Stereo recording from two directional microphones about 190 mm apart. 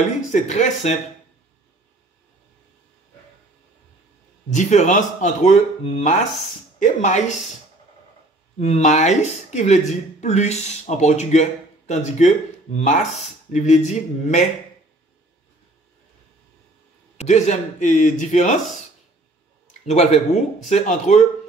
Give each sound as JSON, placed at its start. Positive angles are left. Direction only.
{"t": 0.3, "sound": "speech", "side_deg": 40}
{"t": 4.5, "sound": "speech", "side_deg": 40}
{"t": 8.5, "sound": "speech", "side_deg": 35}
{"t": 17.2, "sound": "speech", "side_deg": 35}
{"t": 19.9, "sound": "speech", "side_deg": 35}